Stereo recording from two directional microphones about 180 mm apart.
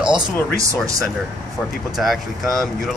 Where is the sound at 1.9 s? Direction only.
Centre (ahead or behind).